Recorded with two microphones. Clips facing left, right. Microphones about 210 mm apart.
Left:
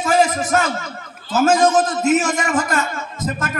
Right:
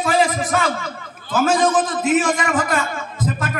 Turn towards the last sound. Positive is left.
turn(degrees=45)  # may be behind; listen again after turning